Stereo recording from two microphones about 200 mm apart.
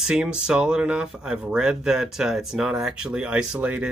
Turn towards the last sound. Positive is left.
turn(degrees=-5)  # may be behind; listen again after turning